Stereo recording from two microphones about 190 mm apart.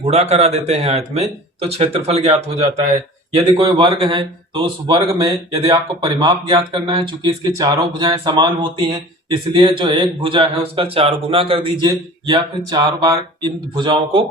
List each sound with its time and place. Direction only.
0.0 s speech: 35° right (ahead or behind)